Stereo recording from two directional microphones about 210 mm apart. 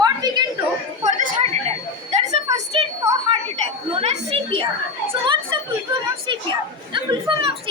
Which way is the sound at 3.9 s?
25° right (ahead or behind).